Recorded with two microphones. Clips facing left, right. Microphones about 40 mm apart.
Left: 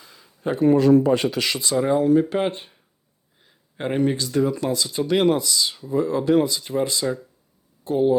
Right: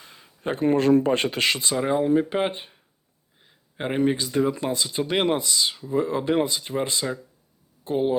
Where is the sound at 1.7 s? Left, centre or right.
Centre.